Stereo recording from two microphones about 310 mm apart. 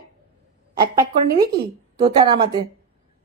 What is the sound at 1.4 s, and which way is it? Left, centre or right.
Speech, right.